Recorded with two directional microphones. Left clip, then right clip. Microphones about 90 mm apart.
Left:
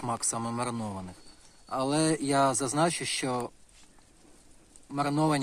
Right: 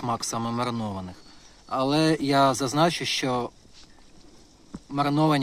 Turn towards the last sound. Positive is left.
turn(degrees=15)  # may be behind; listen again after turning